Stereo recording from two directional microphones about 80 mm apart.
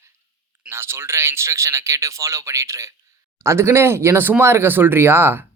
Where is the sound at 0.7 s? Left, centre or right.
Right.